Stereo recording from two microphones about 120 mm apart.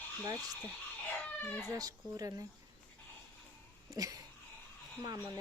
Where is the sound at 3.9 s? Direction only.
30° right (ahead or behind).